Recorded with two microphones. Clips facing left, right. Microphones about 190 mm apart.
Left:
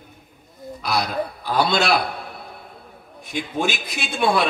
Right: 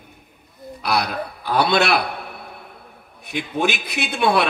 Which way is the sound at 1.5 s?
60° right (ahead or behind).